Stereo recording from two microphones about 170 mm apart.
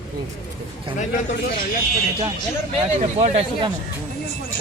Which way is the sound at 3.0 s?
40° right (ahead or behind).